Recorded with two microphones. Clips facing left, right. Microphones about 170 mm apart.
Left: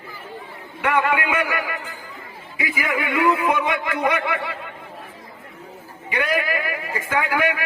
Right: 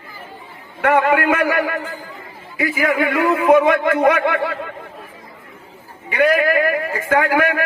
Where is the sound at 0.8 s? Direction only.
50° right (ahead or behind).